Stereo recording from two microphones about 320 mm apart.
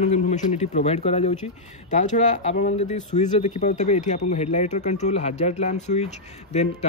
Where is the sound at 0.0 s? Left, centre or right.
Left.